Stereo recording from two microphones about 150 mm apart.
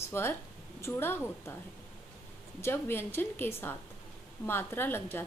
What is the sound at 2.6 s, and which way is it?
A woman's voice, 15° left (ahead or behind).